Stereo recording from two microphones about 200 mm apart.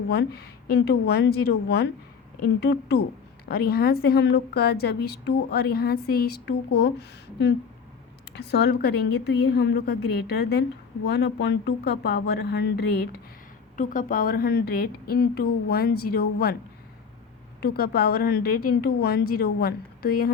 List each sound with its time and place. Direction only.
0.1 s a woman's voice: 55° left (ahead or behind)
8.4 s a woman's voice: 55° left (ahead or behind)
13.7 s a woman's voice: 45° left (ahead or behind)
17.6 s a woman's voice: 50° left (ahead or behind)